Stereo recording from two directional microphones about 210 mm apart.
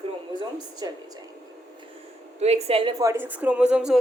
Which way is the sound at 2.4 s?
30° right (ahead or behind).